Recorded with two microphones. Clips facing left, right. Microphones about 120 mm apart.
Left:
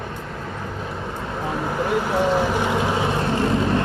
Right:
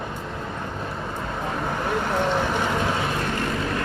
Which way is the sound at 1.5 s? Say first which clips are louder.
Left 4 dB; 5° left (ahead or behind).